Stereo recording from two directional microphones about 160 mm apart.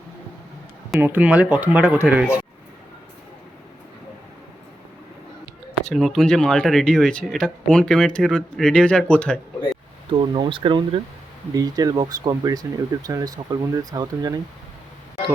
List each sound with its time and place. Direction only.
0.9 s speech: 10° right (ahead or behind)
5.8 s speech: centre (ahead or behind)
10.1 s speech: 30° right (ahead or behind)